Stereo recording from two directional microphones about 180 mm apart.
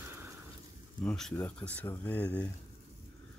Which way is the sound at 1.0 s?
5° left (ahead or behind).